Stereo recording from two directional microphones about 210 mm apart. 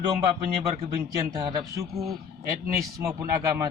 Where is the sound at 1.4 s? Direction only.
20° right (ahead or behind).